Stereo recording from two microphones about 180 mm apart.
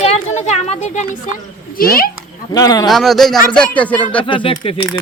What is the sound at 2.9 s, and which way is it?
A woman's voice, centre (ahead or behind).